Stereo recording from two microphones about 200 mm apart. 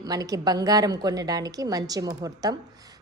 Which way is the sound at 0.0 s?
20° right (ahead or behind).